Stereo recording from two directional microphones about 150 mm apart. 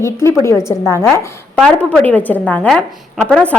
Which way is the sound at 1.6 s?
5° left (ahead or behind).